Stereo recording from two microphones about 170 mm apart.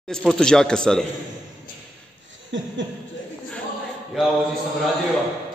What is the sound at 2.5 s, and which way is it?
Chuckle, 90° right.